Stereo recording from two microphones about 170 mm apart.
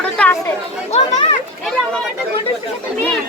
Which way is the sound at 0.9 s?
40° left (ahead or behind).